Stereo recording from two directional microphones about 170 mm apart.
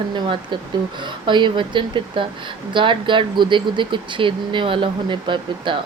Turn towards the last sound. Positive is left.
turn(degrees=-30)  # may be behind; listen again after turning